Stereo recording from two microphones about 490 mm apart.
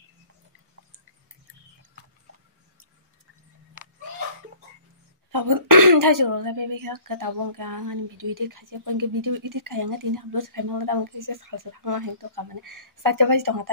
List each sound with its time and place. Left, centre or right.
5.3 s speech: right